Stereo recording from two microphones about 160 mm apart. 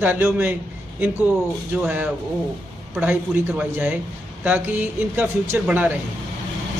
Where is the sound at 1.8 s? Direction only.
10° right (ahead or behind).